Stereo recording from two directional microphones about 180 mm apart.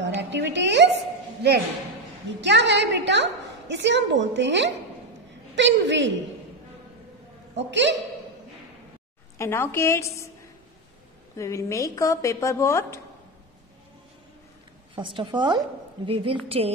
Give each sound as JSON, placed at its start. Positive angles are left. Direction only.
{"t": 0.0, "sound": "a woman's voice", "side_deg": -80}
{"t": 2.4, "sound": "a woman's voice", "side_deg": -75}
{"t": 7.5, "sound": "a woman's voice", "side_deg": -85}
{"t": 9.4, "sound": "speech", "side_deg": 15}
{"t": 11.3, "sound": "speech", "side_deg": 15}
{"t": 15.0, "sound": "a woman's voice", "side_deg": -25}